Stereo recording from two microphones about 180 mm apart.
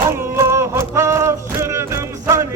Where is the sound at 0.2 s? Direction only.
15° right (ahead or behind).